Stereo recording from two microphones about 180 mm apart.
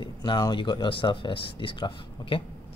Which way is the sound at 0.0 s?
25° left (ahead or behind).